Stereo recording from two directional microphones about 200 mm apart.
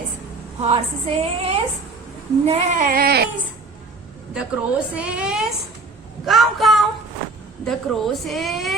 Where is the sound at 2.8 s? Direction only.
50° right (ahead or behind).